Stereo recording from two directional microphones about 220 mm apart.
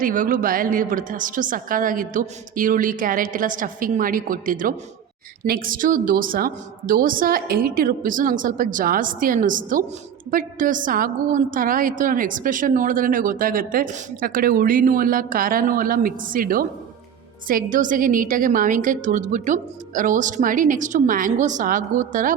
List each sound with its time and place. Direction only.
0.0 s a woman's voice: 40° right (ahead or behind)